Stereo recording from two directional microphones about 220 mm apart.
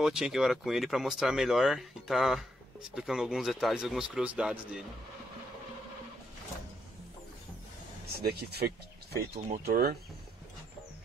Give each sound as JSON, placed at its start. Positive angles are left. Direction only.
{"t": 0.0, "sound": "speech", "side_deg": 0}
{"t": 8.2, "sound": "speech", "side_deg": -45}